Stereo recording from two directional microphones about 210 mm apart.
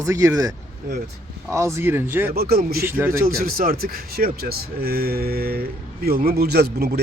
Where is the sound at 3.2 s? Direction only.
45° right (ahead or behind).